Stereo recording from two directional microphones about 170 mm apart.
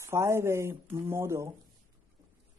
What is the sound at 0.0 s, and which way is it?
Speech, 15° right (ahead or behind).